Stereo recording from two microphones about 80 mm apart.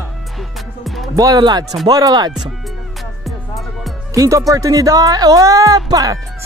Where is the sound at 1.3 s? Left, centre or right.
Right.